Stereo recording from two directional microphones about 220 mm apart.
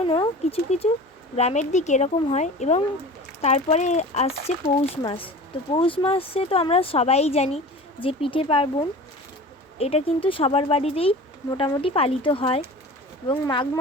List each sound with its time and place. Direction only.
0.0 s speech: 25° left (ahead or behind)